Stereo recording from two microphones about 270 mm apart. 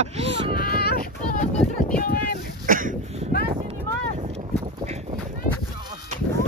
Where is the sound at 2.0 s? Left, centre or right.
Left.